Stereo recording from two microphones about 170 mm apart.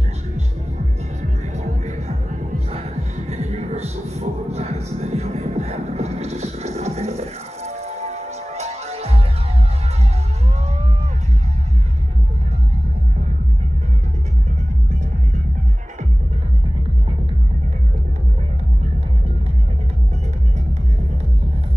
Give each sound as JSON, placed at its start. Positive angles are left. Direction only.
{"t": 1.5, "sound": "music", "side_deg": -40}